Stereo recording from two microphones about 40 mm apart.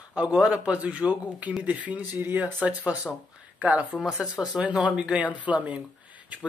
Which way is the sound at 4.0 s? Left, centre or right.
Centre.